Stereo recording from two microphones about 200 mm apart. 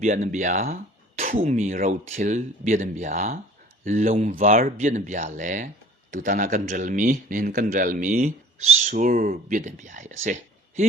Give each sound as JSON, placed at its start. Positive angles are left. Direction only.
{"t": 0.0, "sound": "a man's voice", "side_deg": -35}